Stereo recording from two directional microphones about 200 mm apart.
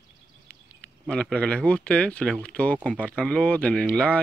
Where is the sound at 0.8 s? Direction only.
5° left (ahead or behind).